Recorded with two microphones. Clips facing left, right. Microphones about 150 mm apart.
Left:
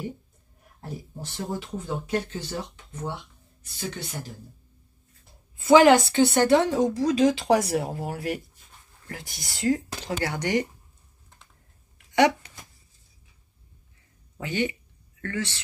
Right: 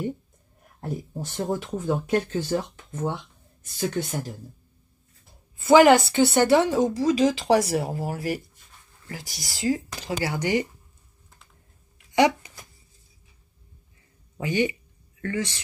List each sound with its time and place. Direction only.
0.7 s speech: 50° right (ahead or behind)
5.7 s speech: 5° right (ahead or behind)
9.4 s speech: centre (ahead or behind)
14.4 s speech: 15° right (ahead or behind)